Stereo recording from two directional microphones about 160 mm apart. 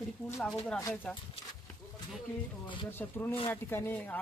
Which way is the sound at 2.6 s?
30° left (ahead or behind).